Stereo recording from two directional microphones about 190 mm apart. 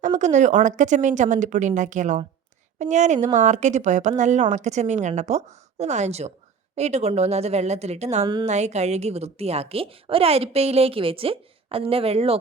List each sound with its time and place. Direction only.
0.0 s a woman's voice: 40° right (ahead or behind)